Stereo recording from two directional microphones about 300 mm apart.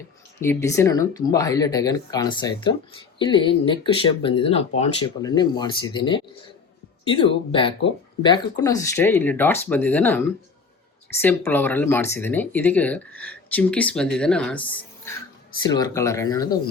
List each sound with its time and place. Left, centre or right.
0.3 s speech: centre